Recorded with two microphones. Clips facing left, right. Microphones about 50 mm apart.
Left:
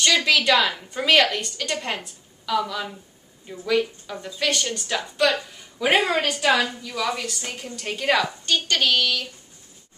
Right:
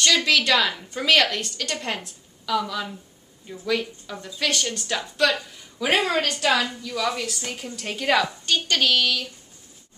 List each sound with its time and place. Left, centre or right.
0.0 s a woman's voice: centre
6.5 s a woman's voice: left
6.8 s a woman's voice: centre